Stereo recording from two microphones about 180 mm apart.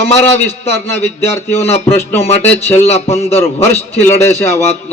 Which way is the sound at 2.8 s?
35° left (ahead or behind).